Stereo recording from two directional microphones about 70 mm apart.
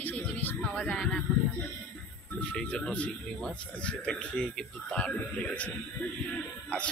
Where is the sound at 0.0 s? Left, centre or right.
Left.